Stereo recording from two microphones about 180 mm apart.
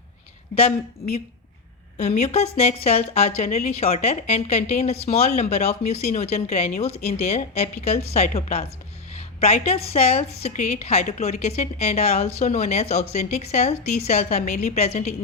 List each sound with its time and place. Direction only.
2.0 s a woman's voice: 40° left (ahead or behind)